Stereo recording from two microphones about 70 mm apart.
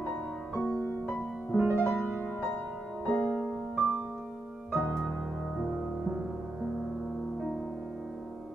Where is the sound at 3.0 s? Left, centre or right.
Centre.